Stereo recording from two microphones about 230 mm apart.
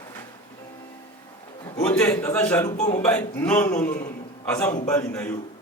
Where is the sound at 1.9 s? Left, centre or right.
Centre.